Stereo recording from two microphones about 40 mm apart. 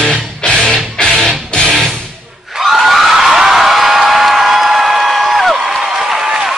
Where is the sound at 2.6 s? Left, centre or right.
Centre.